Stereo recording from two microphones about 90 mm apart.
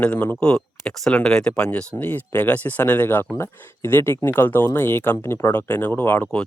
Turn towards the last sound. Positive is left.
turn(degrees=15)  # may be behind; listen again after turning